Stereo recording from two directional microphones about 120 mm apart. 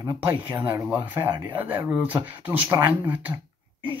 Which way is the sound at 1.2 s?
25° right (ahead or behind).